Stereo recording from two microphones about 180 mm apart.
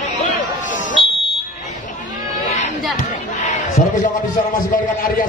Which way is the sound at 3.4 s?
45° left (ahead or behind).